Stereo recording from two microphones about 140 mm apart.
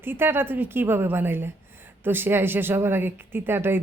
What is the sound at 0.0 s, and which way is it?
A woman's voice, 15° right (ahead or behind).